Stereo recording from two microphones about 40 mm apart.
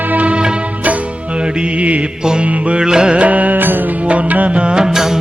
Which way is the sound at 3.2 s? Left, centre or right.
Right.